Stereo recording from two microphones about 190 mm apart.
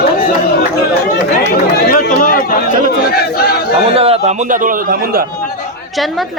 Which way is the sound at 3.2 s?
55° left (ahead or behind).